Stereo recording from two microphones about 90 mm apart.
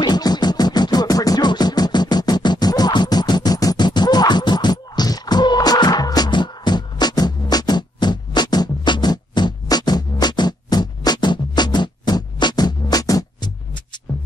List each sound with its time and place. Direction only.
0.0 s music: 50° left (ahead or behind)